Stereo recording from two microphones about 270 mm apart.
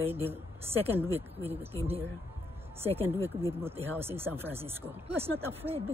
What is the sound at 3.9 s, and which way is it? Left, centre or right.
A woman's voice, centre.